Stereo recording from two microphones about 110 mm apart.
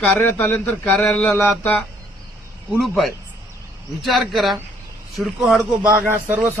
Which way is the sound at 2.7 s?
Centre (ahead or behind).